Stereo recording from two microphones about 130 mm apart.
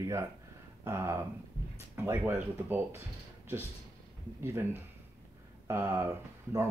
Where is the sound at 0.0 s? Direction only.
20° right (ahead or behind).